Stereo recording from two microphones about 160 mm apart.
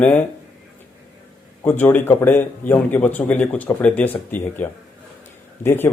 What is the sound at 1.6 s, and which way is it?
Speech, 10° left (ahead or behind).